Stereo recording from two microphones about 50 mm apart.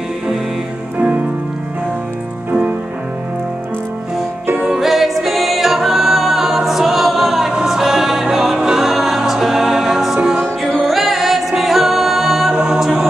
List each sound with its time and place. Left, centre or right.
0.9 s music: right
4.7 s music: centre
12.5 s chant: centre